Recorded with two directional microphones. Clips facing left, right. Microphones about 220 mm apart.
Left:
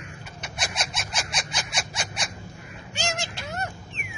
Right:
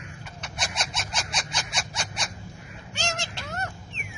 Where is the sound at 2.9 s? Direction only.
10° left (ahead or behind).